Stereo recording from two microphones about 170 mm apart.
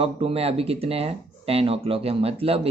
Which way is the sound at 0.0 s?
35° right (ahead or behind).